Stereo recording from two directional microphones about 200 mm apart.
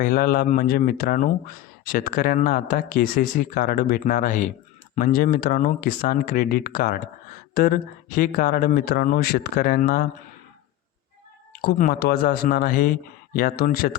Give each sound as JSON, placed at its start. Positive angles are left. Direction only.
{"t": 0.0, "sound": "speech", "side_deg": 45}
{"t": 11.6, "sound": "speech", "side_deg": 50}